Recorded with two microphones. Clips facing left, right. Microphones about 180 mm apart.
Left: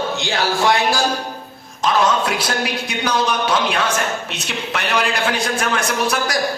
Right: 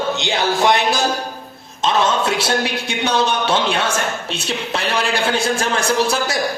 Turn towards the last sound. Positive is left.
turn(degrees=-30)  # may be behind; listen again after turning